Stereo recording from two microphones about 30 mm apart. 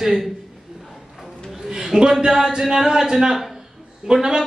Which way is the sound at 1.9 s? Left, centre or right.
Right.